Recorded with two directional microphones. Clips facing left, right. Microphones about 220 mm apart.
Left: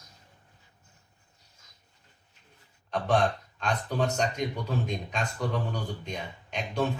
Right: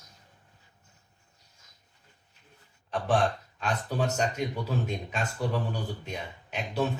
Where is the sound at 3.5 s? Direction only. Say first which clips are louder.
Left 2 dB; 5° right (ahead or behind).